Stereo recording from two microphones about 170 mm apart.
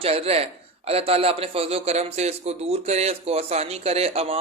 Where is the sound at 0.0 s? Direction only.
35° right (ahead or behind).